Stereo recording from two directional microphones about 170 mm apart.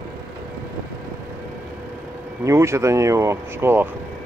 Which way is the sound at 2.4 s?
15° right (ahead or behind).